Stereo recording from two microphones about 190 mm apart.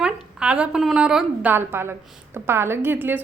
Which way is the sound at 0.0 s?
5° right (ahead or behind).